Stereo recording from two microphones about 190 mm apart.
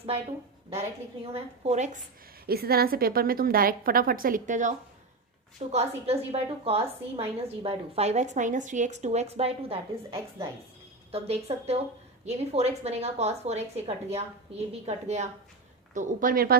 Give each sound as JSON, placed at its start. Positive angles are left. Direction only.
{"t": 0.7, "sound": "a woman's voice", "side_deg": -30}
{"t": 2.5, "sound": "a woman's voice", "side_deg": -55}
{"t": 16.0, "sound": "a woman's voice", "side_deg": -50}